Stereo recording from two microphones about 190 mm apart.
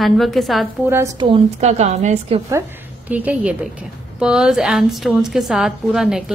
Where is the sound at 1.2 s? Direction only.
30° right (ahead or behind).